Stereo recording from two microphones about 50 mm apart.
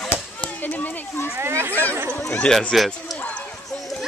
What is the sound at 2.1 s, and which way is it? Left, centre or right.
Chatter, left.